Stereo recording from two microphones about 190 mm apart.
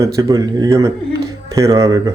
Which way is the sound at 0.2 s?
20° right (ahead or behind).